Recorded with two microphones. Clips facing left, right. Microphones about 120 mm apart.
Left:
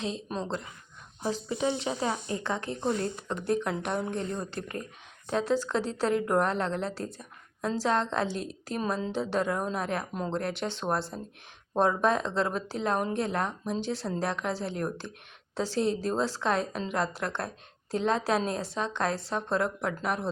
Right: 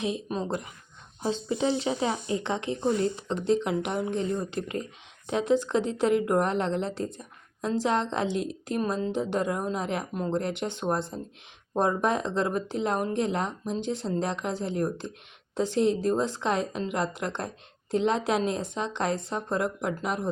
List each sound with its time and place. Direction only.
0.0 s speech: 15° right (ahead or behind)
1.2 s speech: 25° right (ahead or behind)